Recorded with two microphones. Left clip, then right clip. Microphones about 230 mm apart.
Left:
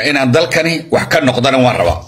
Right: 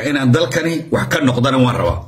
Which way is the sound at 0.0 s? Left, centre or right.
Centre.